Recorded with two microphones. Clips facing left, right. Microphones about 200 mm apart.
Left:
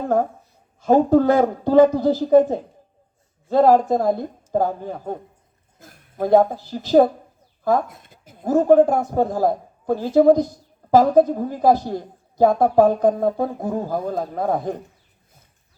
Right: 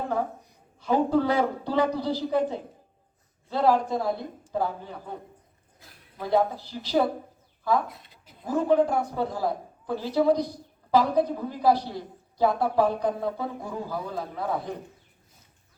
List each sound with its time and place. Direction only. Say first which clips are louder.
0.1 s a woman's voice: left 8 dB; 45° left (ahead or behind)